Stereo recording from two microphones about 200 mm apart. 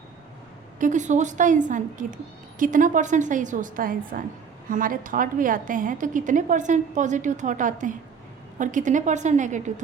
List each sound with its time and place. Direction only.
0.8 s a woman's voice: 40° right (ahead or behind)